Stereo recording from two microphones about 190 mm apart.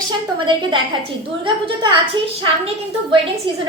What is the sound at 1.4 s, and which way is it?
A woman's voice, 30° right (ahead or behind).